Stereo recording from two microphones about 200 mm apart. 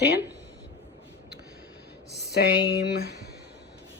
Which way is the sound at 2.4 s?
55° left (ahead or behind).